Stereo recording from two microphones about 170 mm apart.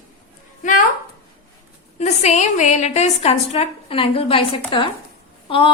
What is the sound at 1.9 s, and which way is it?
A woman's voice, 40° left (ahead or behind).